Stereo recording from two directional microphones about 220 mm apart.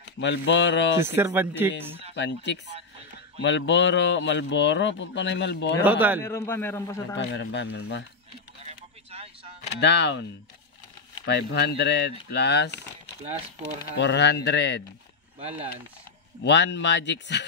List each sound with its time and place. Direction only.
0.2 s speech: 55° left (ahead or behind)
1.0 s speech: 10° right (ahead or behind)
2.1 s speech: 55° left (ahead or behind)
5.9 s speech: 10° right (ahead or behind)
6.2 s a man's voice: 10° left (ahead or behind)
7.2 s speech: 50° left (ahead or behind)
8.6 s a sound: 25° right (ahead or behind)
9.8 s speech: 50° left (ahead or behind)
11.2 s speech: 50° left (ahead or behind)
13.9 s speech: 50° left (ahead or behind)
15.3 s speech: 25° right (ahead or behind)
16.4 s speech: 50° left (ahead or behind)